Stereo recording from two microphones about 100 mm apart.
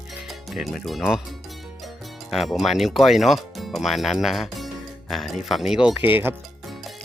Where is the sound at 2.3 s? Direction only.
Centre (ahead or behind).